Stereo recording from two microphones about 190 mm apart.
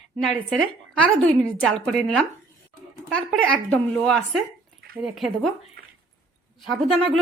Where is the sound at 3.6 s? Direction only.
5° left (ahead or behind).